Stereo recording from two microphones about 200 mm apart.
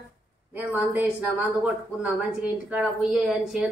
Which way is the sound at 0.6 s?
10° right (ahead or behind).